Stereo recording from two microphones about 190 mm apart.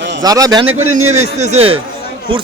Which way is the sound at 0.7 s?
90° right.